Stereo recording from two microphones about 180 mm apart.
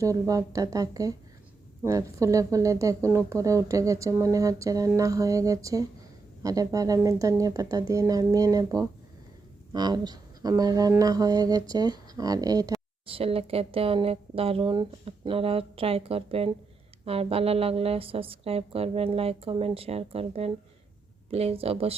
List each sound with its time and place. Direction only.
0.0 s speech: 20° right (ahead or behind)
13.1 s a woman's voice: 30° right (ahead or behind)